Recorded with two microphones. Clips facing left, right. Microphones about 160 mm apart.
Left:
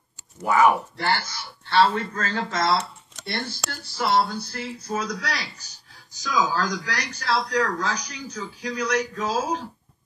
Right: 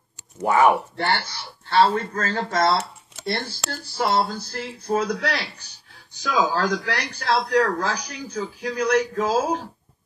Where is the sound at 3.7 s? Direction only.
40° right (ahead or behind).